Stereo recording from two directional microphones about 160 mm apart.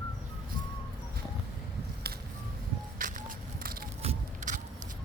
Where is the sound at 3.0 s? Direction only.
65° right (ahead or behind).